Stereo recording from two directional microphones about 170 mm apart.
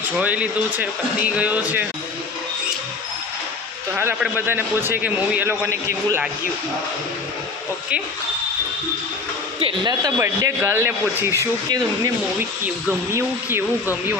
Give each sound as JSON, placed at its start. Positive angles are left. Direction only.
{"t": 0.2, "sound": "speech", "side_deg": -10}
{"t": 3.9, "sound": "speech", "side_deg": -10}
{"t": 9.6, "sound": "speech", "side_deg": -30}